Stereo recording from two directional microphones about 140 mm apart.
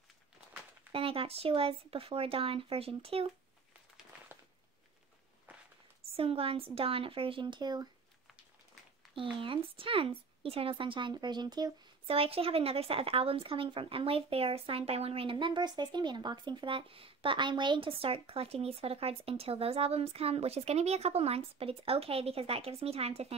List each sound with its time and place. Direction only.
0.9 s speech: 40° right (ahead or behind)
6.1 s a woman's voice: 45° right (ahead or behind)
9.4 s a woman's voice: 40° right (ahead or behind)
12.1 s speech: 45° right (ahead or behind)